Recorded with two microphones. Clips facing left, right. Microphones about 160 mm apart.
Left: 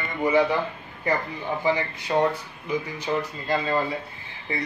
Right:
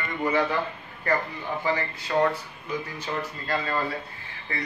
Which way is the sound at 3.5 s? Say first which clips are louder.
Left 4 dB; 20° left (ahead or behind).